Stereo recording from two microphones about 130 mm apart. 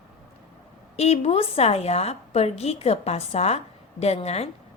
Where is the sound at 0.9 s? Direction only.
55° left (ahead or behind).